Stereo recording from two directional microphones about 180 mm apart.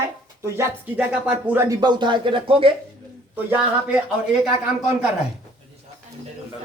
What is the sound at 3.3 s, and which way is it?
Speech, 10° right (ahead or behind).